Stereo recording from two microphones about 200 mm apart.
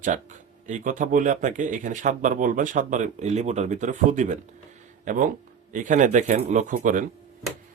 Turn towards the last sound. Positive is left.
turn(degrees=-40)  # may be behind; listen again after turning